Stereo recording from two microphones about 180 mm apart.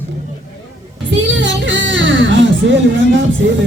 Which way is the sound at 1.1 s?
90° right.